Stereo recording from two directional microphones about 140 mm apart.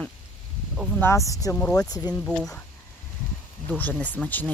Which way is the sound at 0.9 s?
20° left (ahead or behind).